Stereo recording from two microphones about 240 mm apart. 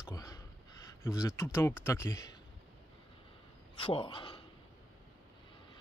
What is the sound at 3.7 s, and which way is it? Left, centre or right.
Speech, left.